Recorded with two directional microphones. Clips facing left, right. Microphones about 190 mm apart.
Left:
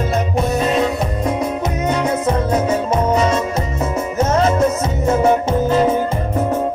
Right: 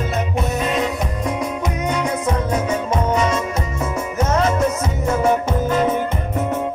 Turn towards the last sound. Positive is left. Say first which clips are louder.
# left 3 dB
turn(degrees=30)  # may be behind; listen again after turning